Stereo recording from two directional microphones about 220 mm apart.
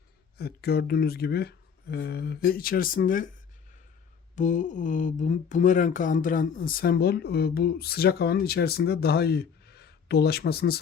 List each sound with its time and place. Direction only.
0.3 s speech: 45° left (ahead or behind)
4.4 s speech: 35° left (ahead or behind)